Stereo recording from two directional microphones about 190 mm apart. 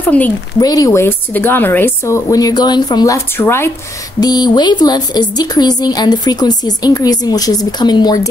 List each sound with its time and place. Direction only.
0.1 s a woman's voice: 5° left (ahead or behind)
0.6 s a woman's voice: 20° left (ahead or behind)